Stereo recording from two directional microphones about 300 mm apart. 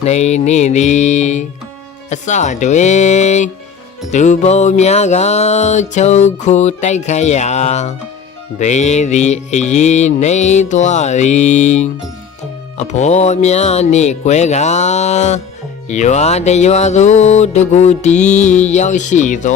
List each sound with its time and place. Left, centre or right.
0.0 s music: left